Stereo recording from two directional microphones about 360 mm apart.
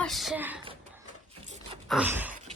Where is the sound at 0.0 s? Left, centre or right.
Centre.